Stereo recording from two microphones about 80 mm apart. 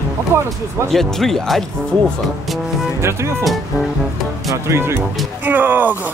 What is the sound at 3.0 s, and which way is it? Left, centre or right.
Speech, right.